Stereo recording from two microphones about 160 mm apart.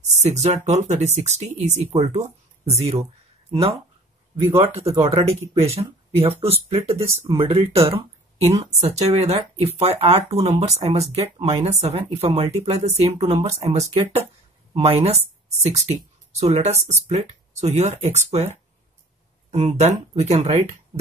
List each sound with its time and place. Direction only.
0.2 s speech: 45° right (ahead or behind)
4.5 s speech: 35° right (ahead or behind)